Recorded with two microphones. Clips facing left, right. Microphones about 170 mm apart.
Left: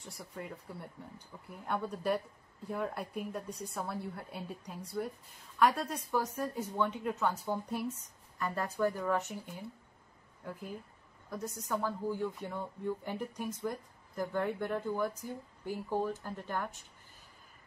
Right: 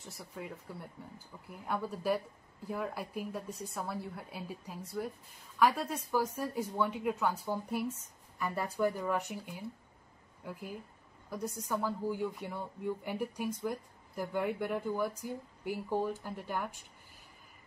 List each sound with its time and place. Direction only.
0.0 s a woman's voice: centre (ahead or behind)